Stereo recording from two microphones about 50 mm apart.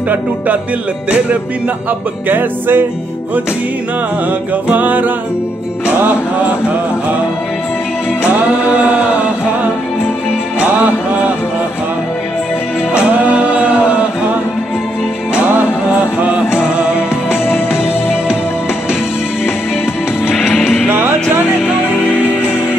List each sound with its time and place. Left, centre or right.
2.2 s music: right
4.6 s music: right
8.6 s a sound: right
12.9 s music: right
15.5 s music: right
20.6 s music: centre